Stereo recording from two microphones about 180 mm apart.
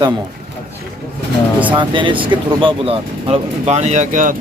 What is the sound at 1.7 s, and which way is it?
Speech, 25° right (ahead or behind).